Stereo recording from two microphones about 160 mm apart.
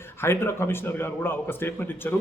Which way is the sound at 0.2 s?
15° left (ahead or behind).